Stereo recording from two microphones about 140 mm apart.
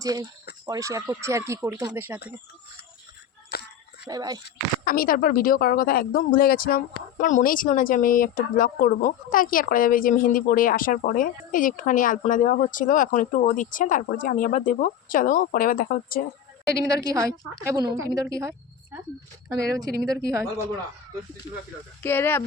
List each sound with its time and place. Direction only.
0.0 s speech: 25° right (ahead or behind)
4.0 s speech: 30° right (ahead or behind)
4.9 s speech: 90° left
16.8 s speech: 25° right (ahead or behind)
22.0 s speech: 15° left (ahead or behind)